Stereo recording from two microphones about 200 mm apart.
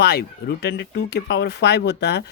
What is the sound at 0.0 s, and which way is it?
Speech, 50° left (ahead or behind).